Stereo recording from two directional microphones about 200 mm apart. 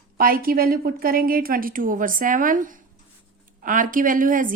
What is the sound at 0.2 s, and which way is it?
A woman's voice, 45° right (ahead or behind).